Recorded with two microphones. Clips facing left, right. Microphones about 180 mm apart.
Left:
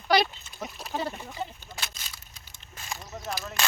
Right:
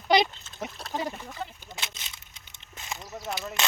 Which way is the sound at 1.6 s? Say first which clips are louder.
Even; 20° right (ahead or behind).